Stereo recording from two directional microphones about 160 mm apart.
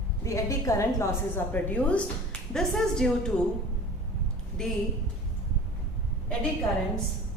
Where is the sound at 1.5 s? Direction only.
10° left (ahead or behind).